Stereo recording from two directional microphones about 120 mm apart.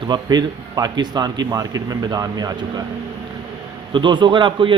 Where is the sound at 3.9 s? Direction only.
40° right (ahead or behind).